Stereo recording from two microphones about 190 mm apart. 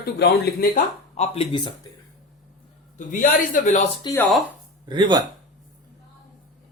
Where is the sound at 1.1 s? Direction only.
35° left (ahead or behind).